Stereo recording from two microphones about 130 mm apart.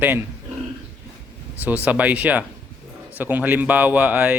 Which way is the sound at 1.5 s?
10° right (ahead or behind).